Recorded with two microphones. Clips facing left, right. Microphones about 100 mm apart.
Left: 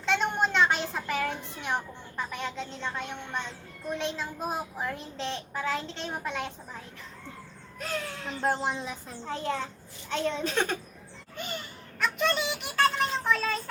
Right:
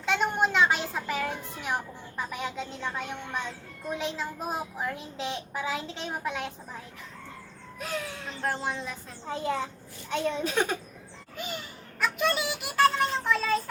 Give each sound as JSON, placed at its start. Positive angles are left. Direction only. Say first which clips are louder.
{"t": 0.0, "sound": "a child's voice", "louder": "right 1 dB", "side_deg": -5}
{"t": 7.8, "sound": "a child's voice", "louder": "even", "side_deg": -5}
{"t": 8.4, "sound": "speech", "louder": "left 3 dB", "side_deg": 20}
{"t": 9.2, "sound": "a child's voice", "louder": "right 2 dB", "side_deg": -5}